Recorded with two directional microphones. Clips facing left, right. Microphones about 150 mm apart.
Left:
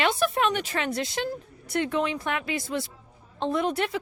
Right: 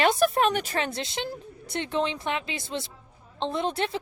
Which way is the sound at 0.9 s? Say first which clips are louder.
Left 3 dB; 25° right (ahead or behind).